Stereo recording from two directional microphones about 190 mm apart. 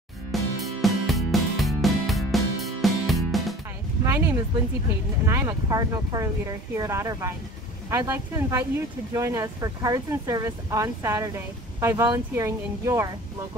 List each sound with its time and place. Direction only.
0.3 s music: centre (ahead or behind)
4.0 s a sound: 15° right (ahead or behind)
5.2 s speech: 15° right (ahead or behind)